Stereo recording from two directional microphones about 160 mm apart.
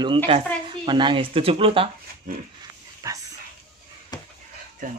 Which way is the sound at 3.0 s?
20° right (ahead or behind).